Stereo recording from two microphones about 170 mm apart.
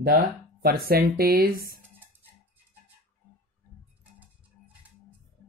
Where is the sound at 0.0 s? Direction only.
55° right (ahead or behind).